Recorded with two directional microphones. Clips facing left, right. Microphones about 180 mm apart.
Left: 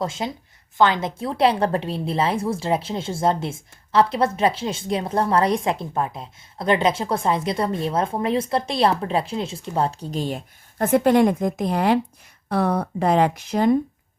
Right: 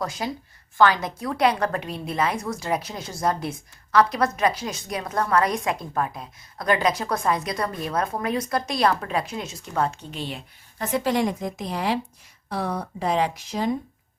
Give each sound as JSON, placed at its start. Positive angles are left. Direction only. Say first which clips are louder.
{"t": 0.0, "sound": "a woman's voice", "louder": "left 2 dB", "side_deg": 25}